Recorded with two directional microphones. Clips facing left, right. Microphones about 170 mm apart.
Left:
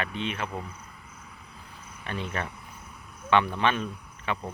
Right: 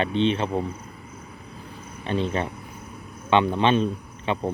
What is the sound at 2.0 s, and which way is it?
Speech, 25° right (ahead or behind).